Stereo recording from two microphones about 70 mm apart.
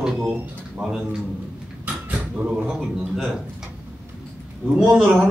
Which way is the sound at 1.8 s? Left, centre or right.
Right.